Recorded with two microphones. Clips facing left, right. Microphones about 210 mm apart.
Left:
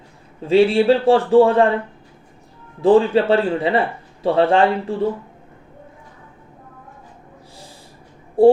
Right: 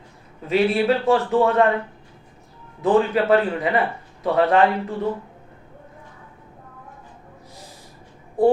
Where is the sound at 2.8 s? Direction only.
30° left (ahead or behind).